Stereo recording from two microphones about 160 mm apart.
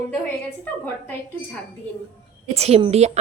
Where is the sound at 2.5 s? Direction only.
40° right (ahead or behind).